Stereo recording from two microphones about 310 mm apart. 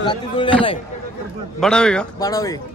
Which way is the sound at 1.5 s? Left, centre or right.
Centre.